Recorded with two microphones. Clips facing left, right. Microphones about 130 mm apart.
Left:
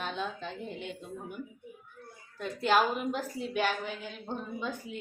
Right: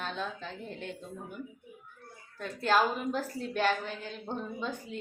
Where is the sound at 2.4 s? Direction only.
20° left (ahead or behind).